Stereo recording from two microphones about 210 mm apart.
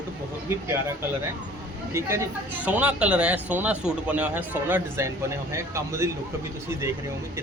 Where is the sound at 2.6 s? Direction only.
5° right (ahead or behind).